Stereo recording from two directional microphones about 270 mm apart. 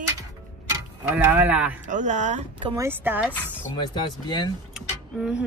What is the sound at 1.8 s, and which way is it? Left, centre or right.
Speech, right.